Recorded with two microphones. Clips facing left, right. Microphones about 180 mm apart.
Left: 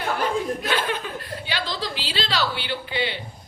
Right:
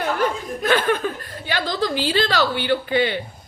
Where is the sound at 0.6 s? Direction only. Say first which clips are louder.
Right 6 dB; 50° right (ahead or behind).